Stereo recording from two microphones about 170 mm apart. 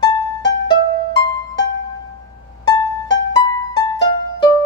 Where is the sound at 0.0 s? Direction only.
25° left (ahead or behind).